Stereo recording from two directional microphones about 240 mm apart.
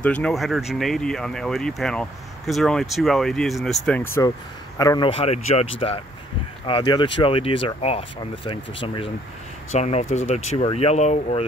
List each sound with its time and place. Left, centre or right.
0.0 s speech: centre; by 11.4 s left